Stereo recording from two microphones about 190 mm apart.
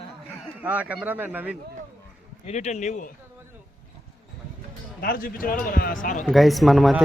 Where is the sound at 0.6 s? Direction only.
10° right (ahead or behind).